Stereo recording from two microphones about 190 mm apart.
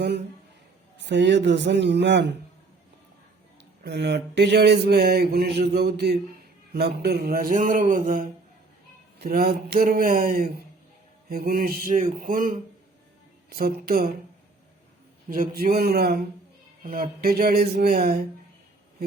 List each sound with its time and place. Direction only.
0.0 s speech: 65° right (ahead or behind)
3.8 s mantra: 60° right (ahead or behind)
15.3 s mantra: 50° right (ahead or behind)